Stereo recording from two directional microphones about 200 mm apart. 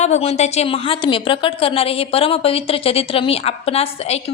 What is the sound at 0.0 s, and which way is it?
A woman's voice, 35° left (ahead or behind).